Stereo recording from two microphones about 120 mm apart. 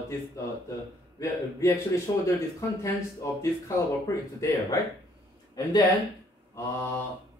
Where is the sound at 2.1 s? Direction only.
40° left (ahead or behind).